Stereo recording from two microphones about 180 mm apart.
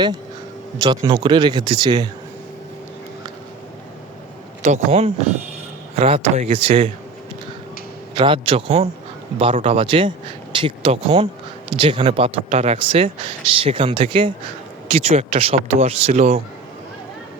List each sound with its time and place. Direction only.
0.8 s speech: 25° right (ahead or behind)
4.6 s speech: 40° right (ahead or behind)
8.1 s speech: 30° right (ahead or behind)